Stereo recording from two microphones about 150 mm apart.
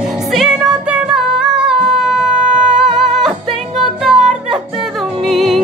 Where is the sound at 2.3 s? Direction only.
55° right (ahead or behind).